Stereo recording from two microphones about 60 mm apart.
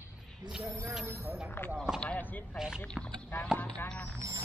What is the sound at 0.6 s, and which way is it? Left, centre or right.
Speech, right.